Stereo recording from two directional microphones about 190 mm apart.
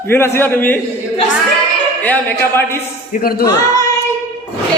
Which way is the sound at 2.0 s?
10° left (ahead or behind).